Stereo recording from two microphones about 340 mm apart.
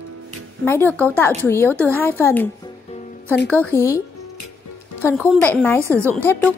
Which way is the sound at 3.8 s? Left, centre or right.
Centre.